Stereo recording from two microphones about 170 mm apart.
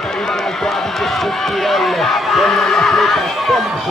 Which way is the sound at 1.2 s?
Centre (ahead or behind).